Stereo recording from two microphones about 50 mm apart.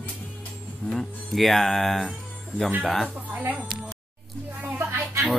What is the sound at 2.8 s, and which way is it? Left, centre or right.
Speech, centre.